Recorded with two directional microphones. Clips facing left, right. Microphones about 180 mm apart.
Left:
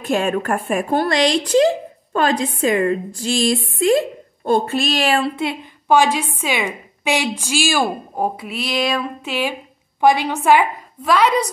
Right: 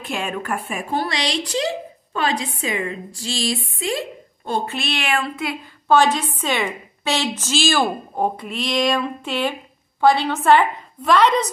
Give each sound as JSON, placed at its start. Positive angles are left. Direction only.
{"t": 0.0, "sound": "a woman's voice", "side_deg": 45}
{"t": 5.9, "sound": "a woman's voice", "side_deg": 10}